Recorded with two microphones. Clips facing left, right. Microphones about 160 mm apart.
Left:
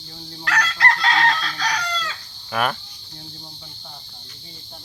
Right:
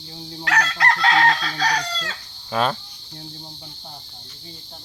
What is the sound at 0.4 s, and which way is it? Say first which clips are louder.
Chicken: right 2 dB; 45° right (ahead or behind).